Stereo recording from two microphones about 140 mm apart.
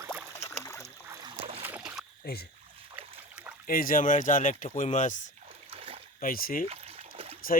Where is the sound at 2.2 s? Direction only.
90° left.